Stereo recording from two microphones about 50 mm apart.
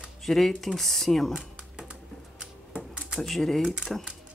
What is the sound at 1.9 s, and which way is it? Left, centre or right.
Typewriter, centre.